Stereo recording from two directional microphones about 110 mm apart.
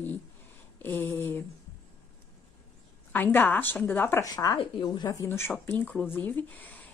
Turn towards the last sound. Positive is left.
turn(degrees=15)  # may be behind; listen again after turning